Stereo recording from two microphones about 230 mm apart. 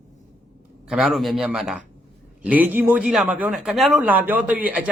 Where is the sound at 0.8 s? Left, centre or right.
Centre.